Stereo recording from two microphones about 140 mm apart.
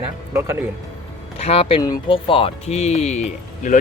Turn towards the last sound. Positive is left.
turn(degrees=60)  # may be behind; listen again after turning